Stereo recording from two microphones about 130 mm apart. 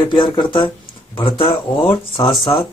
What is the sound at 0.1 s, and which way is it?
Speech, 35° left (ahead or behind).